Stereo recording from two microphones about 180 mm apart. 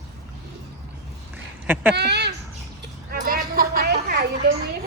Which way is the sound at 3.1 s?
55° right (ahead or behind).